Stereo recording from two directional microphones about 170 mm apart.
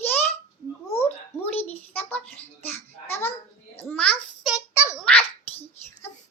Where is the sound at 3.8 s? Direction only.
10° left (ahead or behind).